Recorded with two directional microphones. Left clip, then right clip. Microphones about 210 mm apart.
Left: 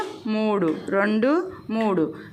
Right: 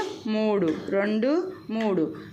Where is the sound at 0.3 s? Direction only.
10° left (ahead or behind).